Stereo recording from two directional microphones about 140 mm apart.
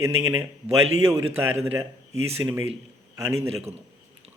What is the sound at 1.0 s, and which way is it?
A man's voice, 20° right (ahead or behind).